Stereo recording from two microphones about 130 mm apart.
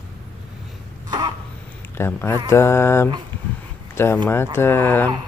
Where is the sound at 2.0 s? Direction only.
20° left (ahead or behind).